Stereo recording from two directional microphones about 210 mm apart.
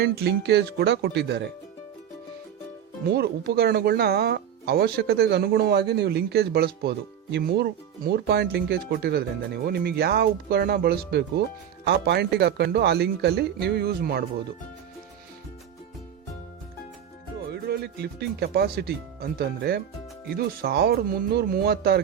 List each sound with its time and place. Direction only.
0.0 s speech: 50° right (ahead or behind)
3.1 s speech: 50° right (ahead or behind)
17.5 s speech: 50° right (ahead or behind)